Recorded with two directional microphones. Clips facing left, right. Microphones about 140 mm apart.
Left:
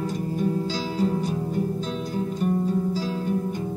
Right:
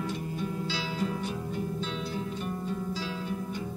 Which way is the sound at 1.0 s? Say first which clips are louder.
Left 10 dB; 35° left (ahead or behind).